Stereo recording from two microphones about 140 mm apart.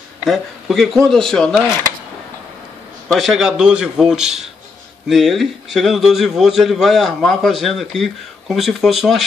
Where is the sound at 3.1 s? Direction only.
Centre (ahead or behind).